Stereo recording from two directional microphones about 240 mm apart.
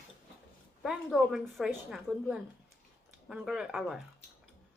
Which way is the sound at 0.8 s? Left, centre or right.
Centre.